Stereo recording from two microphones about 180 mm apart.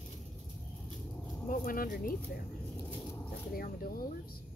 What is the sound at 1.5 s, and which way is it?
Speech, 55° left (ahead or behind).